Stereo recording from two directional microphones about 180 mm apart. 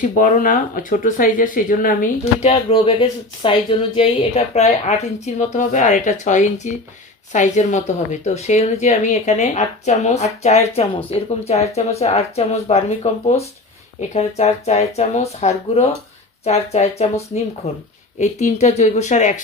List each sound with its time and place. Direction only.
0.0 s speech: 45° left (ahead or behind)
2.5 s speech: 30° left (ahead or behind)